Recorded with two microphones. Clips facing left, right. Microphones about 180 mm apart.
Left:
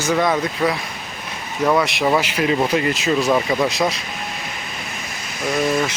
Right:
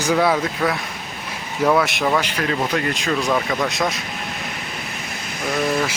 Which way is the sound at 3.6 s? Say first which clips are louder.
Left 2 dB; centre (ahead or behind).